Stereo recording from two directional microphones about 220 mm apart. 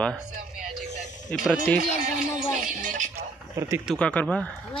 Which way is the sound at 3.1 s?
10° right (ahead or behind).